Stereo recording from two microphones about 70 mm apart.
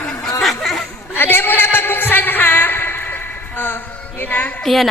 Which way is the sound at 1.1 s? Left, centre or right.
Left.